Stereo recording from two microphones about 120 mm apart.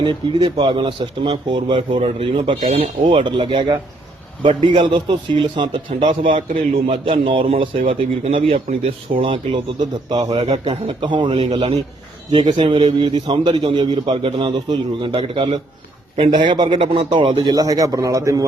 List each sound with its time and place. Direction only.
0.0 s a man's voice: 45° right (ahead or behind)
17.4 s a man's voice: 30° right (ahead or behind)